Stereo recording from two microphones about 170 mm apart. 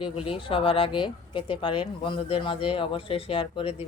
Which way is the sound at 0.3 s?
30° left (ahead or behind).